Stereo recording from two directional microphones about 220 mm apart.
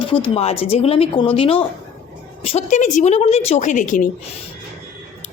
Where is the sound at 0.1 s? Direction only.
25° left (ahead or behind).